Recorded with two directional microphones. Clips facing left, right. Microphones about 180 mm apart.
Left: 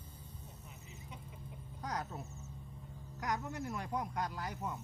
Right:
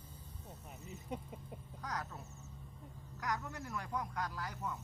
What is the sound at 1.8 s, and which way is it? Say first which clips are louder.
Speech: left 3 dB; 25° left (ahead or behind).